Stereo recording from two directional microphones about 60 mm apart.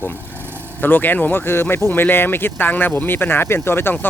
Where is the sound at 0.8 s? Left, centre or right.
Left.